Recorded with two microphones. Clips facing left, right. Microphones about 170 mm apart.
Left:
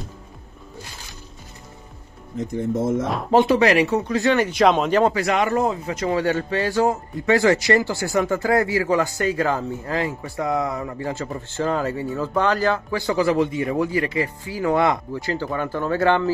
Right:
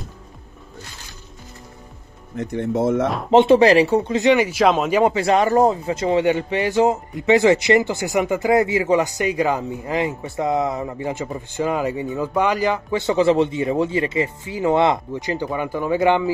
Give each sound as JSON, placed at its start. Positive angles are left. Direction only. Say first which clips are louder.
{"t": 2.3, "sound": "speech", "louder": "right 1 dB", "side_deg": -70}
{"t": 3.3, "sound": "speech", "louder": "right 4 dB", "side_deg": -25}
{"t": 5.1, "sound": "speech", "louder": "right 4 dB", "side_deg": -30}